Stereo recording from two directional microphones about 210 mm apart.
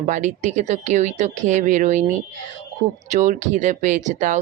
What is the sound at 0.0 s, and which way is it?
A woman's voice, 35° right (ahead or behind).